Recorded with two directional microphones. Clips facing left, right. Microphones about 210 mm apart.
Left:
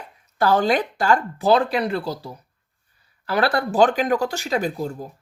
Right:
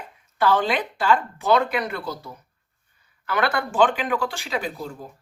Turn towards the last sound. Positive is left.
turn(degrees=40)  # may be behind; listen again after turning